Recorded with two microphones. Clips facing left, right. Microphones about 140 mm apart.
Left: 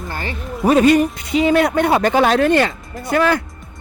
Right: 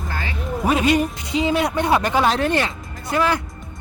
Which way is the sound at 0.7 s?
45° left (ahead or behind).